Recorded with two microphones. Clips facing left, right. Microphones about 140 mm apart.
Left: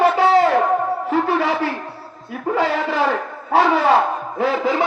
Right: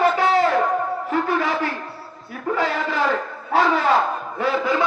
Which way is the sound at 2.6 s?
70° left (ahead or behind).